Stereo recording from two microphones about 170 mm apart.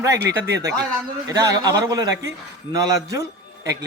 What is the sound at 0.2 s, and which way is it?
Speech, 75° right (ahead or behind).